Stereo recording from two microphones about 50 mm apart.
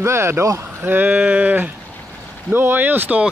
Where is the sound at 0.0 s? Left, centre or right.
Right.